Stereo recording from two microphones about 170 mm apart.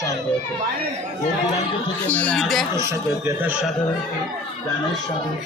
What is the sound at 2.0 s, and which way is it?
Speech, 10° left (ahead or behind).